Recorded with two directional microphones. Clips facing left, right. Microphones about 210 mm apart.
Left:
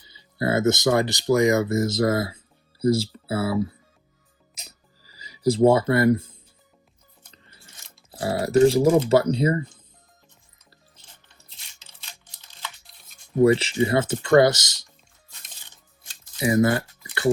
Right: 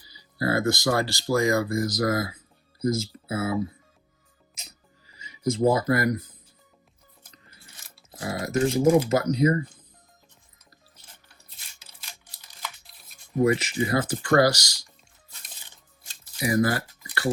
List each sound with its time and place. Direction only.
0.0 s speech: 25° left (ahead or behind)
5.0 s speech: 35° left (ahead or behind)
7.3 s scissors: 30° left (ahead or behind)
8.2 s speech: 30° left (ahead or behind)
11.3 s a sound: 10° right (ahead or behind)
13.4 s speech: 30° left (ahead or behind)
16.4 s a sound: 25° left (ahead or behind)